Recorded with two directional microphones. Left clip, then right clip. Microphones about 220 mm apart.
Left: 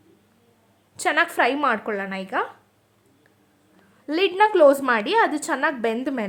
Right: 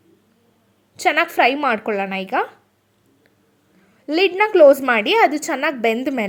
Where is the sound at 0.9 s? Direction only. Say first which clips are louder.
Right 4 dB; 10° right (ahead or behind).